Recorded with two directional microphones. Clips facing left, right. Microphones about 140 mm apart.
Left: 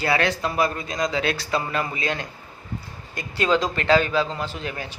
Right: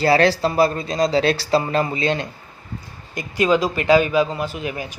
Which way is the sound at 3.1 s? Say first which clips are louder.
Right 4 dB; 15° right (ahead or behind).